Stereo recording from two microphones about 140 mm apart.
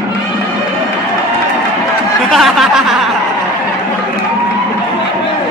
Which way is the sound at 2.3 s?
Centre (ahead or behind).